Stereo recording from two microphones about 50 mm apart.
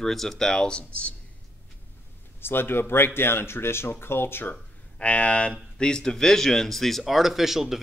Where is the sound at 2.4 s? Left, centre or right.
Left.